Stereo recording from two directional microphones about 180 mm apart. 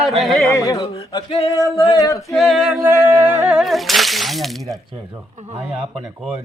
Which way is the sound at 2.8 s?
15° right (ahead or behind).